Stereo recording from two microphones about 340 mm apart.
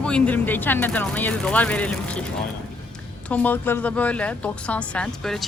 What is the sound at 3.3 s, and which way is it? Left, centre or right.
Speech, centre.